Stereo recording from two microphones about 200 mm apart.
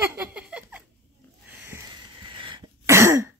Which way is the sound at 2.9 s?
15° right (ahead or behind).